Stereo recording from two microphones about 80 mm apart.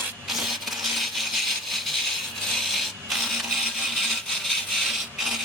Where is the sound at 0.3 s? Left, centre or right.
Centre.